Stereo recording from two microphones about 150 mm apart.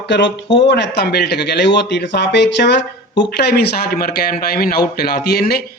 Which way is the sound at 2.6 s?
90° left.